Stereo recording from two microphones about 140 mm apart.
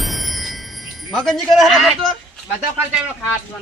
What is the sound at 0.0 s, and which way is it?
Chime, centre (ahead or behind).